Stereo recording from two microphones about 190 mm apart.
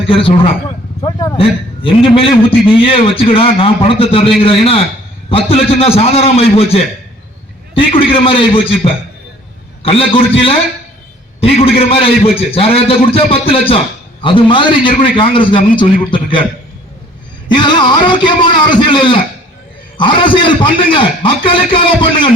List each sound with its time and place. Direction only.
0.1 s a man's voice: 30° left (ahead or behind)
11.3 s a man's voice: 30° left (ahead or behind)
17.5 s a man's voice: 25° left (ahead or behind)